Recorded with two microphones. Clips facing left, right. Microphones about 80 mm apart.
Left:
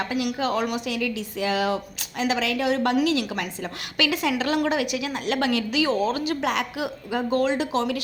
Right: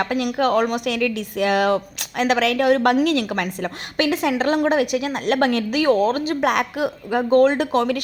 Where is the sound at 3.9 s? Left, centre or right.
Right.